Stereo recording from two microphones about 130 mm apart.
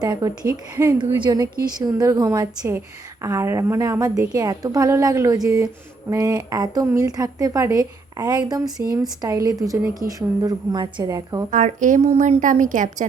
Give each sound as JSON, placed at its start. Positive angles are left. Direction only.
{"t": 0.0, "sound": "a woman's voice", "side_deg": -30}
{"t": 0.9, "sound": "a woman's voice", "side_deg": -35}
{"t": 11.5, "sound": "a woman's voice", "side_deg": -75}